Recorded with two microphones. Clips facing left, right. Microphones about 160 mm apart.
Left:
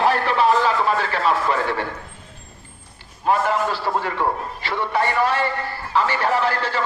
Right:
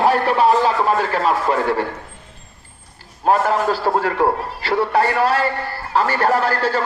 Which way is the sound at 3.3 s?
40° right (ahead or behind).